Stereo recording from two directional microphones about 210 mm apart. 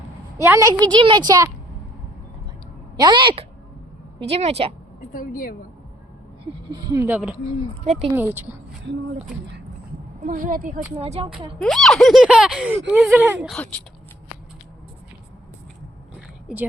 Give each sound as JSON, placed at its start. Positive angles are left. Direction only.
{"t": 0.3, "sound": "a woman's voice", "side_deg": -15}
{"t": 3.0, "sound": "a woman's voice", "side_deg": -20}
{"t": 5.1, "sound": "speech", "side_deg": 40}
{"t": 6.7, "sound": "speech", "side_deg": -20}
{"t": 7.9, "sound": "a woman's voice", "side_deg": -30}
{"t": 8.1, "sound": "speech", "side_deg": -10}
{"t": 10.2, "sound": "a woman's voice", "side_deg": -40}
{"t": 10.9, "sound": "a woman's voice", "side_deg": -25}
{"t": 11.6, "sound": "a sound", "side_deg": 0}
{"t": 12.9, "sound": "speech", "side_deg": -5}
{"t": 13.5, "sound": "a sound", "side_deg": 5}